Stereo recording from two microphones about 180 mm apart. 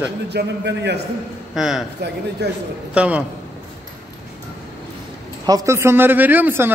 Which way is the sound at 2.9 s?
5° right (ahead or behind).